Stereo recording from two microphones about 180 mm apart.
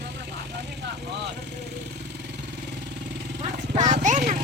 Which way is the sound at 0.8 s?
70° right (ahead or behind).